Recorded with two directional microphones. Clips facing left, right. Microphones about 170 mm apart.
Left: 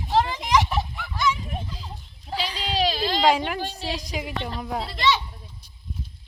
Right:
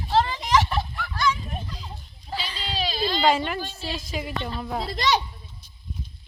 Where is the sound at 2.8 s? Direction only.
90° left.